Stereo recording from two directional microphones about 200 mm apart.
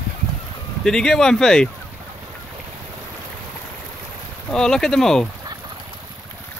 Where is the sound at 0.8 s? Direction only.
5° left (ahead or behind).